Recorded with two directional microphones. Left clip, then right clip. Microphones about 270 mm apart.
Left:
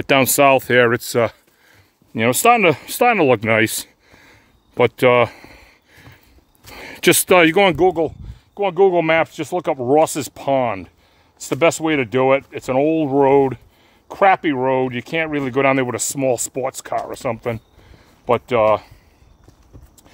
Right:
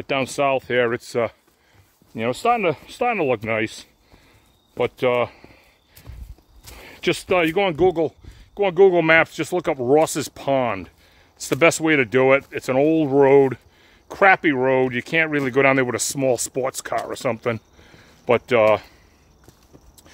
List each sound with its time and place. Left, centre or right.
0.0 s speech: left
7.7 s speech: centre